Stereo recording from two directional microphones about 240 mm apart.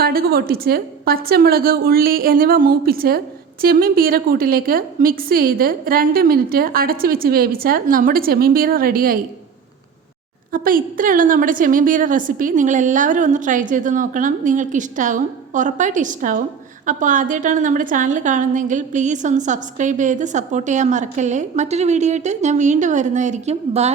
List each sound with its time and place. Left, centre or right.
0.0 s a woman's voice: right
10.5 s a woman's voice: right